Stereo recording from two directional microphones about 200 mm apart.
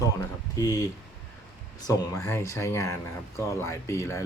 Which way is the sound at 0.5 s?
15° left (ahead or behind).